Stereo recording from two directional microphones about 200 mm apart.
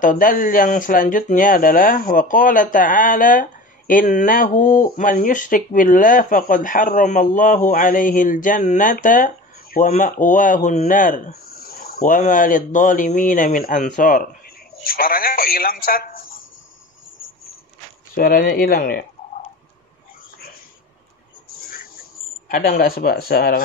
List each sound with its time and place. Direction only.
0.0 s speech: 40° left (ahead or behind)
18.1 s speech: 45° left (ahead or behind)
21.6 s a sound: 45° left (ahead or behind)
22.5 s speech: 45° left (ahead or behind)